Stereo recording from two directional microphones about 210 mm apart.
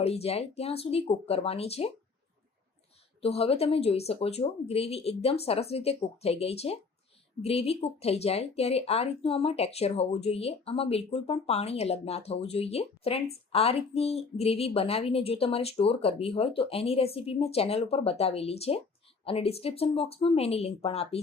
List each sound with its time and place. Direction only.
0.0 s speech: 30° left (ahead or behind)
3.2 s speech: 30° left (ahead or behind)